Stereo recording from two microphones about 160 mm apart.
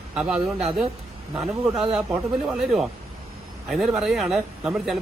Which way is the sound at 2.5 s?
Centre (ahead or behind).